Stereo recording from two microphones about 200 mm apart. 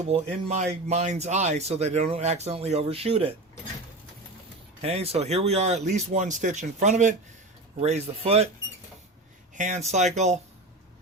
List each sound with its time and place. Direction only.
0.0 s speech: 30° right (ahead or behind)
4.8 s speech: 30° right (ahead or behind)
9.6 s speech: 35° right (ahead or behind)